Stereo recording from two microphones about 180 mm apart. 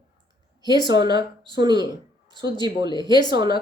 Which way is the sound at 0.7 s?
25° right (ahead or behind).